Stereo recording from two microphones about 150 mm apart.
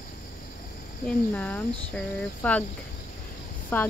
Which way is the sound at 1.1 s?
10° left (ahead or behind).